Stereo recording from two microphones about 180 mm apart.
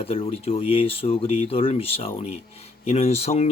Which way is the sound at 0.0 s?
35° left (ahead or behind).